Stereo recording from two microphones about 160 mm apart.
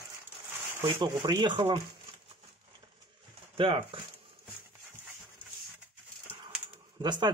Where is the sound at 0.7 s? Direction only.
30° right (ahead or behind).